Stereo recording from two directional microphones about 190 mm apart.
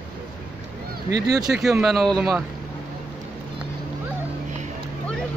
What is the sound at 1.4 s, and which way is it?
Speech, centre (ahead or behind).